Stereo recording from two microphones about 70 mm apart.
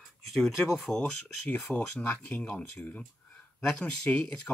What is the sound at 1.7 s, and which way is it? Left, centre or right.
Speech, left.